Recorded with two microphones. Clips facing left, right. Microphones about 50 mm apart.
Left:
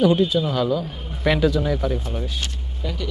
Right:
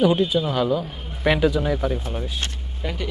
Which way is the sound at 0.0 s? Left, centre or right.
Centre.